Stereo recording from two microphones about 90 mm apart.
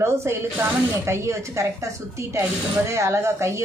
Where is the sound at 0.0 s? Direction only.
30° right (ahead or behind).